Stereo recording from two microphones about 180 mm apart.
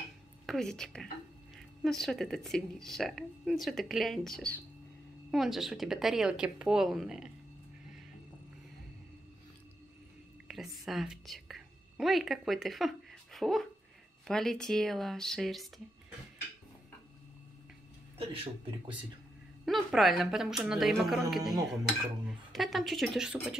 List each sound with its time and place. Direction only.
0.5 s a woman's voice: 5° left (ahead or behind)
10.5 s a woman's voice: centre (ahead or behind)
18.1 s speech: 30° right (ahead or behind)
19.6 s a woman's voice: centre (ahead or behind)